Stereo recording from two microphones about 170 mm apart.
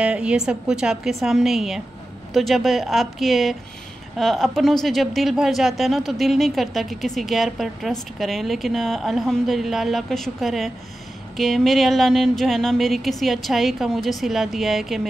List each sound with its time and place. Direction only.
0.0 s speech: 5° right (ahead or behind)